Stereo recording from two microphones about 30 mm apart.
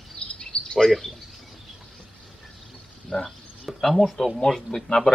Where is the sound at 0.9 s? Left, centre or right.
Centre.